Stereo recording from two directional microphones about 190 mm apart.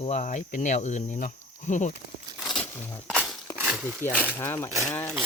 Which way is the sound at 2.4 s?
Centre (ahead or behind).